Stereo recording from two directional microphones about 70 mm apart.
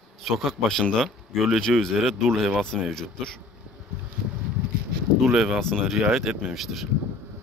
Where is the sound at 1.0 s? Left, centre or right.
Centre.